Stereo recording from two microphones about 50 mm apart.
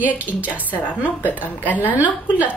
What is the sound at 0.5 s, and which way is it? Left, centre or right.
A woman's voice, left.